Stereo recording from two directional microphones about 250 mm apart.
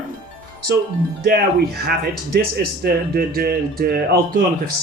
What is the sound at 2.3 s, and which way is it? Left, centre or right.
Speech, right.